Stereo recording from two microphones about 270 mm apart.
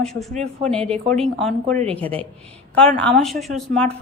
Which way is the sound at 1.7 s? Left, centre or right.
Right.